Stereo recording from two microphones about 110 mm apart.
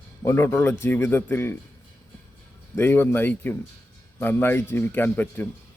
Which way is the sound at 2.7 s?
20° left (ahead or behind).